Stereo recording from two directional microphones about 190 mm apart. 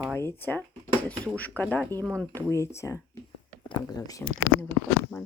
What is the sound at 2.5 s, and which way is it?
Speech, 15° left (ahead or behind).